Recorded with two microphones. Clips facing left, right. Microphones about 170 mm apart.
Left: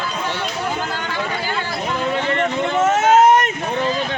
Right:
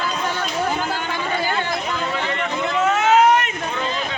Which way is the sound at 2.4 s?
45° left (ahead or behind).